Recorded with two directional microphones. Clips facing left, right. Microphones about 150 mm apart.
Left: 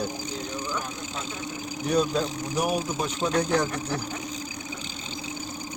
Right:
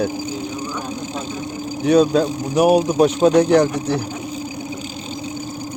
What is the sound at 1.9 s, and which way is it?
Speech, 90° right.